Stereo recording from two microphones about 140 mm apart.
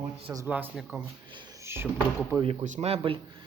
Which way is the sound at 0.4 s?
10° right (ahead or behind).